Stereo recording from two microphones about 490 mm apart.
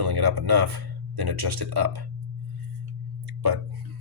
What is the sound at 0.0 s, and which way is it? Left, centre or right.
Speech, right.